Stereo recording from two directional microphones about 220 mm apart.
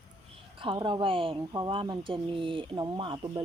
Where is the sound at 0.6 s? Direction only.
20° right (ahead or behind).